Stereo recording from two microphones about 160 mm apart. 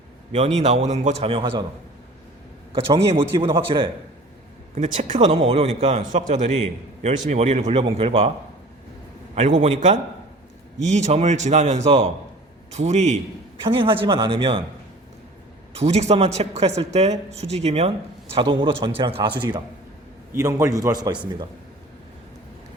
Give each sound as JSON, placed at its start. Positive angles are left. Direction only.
{"t": 0.3, "sound": "speech", "side_deg": -40}
{"t": 1.3, "sound": "speech", "side_deg": -35}
{"t": 2.7, "sound": "speech", "side_deg": -35}
{"t": 4.7, "sound": "speech", "side_deg": -45}
{"t": 9.6, "sound": "speech", "side_deg": -45}
{"t": 13.6, "sound": "speech", "side_deg": -35}
{"t": 15.7, "sound": "a man's voice", "side_deg": -40}